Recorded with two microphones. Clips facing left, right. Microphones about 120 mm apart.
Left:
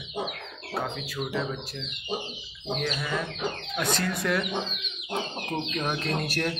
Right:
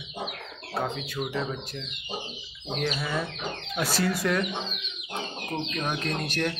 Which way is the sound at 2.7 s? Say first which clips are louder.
Even; 5° right (ahead or behind).